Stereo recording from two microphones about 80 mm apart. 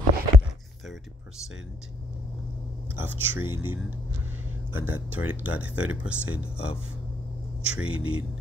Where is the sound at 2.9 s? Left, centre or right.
Right.